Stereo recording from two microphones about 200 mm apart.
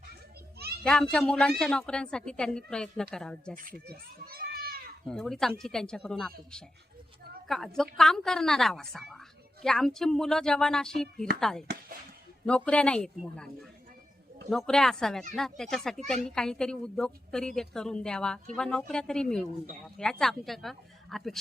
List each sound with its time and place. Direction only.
0.9 s speech: 5° left (ahead or behind)
3.5 s a child's voice: 45° right (ahead or behind)
5.0 s speech: centre (ahead or behind)
7.4 s a woman's voice: centre (ahead or behind)